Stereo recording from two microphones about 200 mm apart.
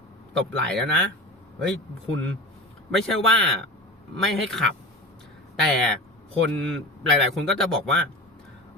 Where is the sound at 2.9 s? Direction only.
Centre (ahead or behind).